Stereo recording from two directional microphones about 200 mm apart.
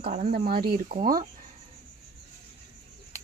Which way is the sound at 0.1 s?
40° right (ahead or behind).